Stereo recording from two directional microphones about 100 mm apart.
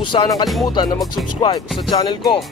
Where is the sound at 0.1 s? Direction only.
50° left (ahead or behind).